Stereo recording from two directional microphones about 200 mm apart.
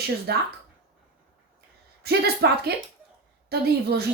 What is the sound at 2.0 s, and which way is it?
Speech, 55° right (ahead or behind).